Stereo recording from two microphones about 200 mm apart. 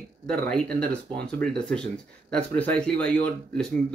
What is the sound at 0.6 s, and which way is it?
Speech, 50° right (ahead or behind).